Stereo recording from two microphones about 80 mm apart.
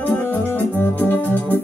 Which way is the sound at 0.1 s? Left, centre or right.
Left.